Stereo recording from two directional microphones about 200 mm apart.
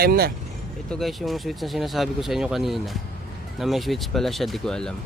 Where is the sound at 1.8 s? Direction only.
Centre (ahead or behind).